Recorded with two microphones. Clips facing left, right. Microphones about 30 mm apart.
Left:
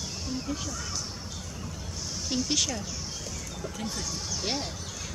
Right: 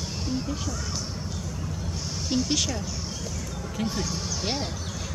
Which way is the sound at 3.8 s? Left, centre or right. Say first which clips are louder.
Right 7 dB; right.